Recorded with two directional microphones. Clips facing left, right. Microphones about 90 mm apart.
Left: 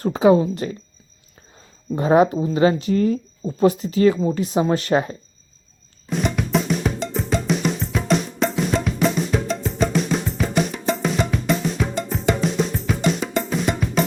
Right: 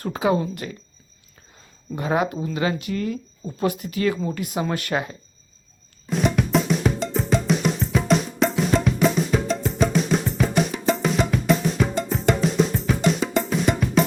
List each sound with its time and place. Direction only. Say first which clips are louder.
0.0 s speech: left 7 dB; 25° left (ahead or behind)
2.0 s speech: left 7 dB; 30° left (ahead or behind)
6.1 s drum: right 1 dB; centre (ahead or behind)